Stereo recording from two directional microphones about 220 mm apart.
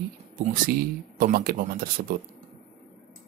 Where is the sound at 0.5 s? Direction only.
40° right (ahead or behind).